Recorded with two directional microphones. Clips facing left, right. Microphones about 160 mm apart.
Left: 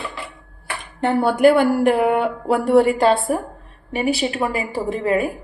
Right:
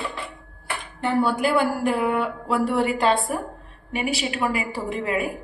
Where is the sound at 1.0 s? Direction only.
55° left (ahead or behind).